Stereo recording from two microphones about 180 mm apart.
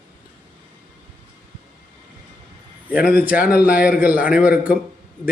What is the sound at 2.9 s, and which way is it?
Speech, 55° left (ahead or behind).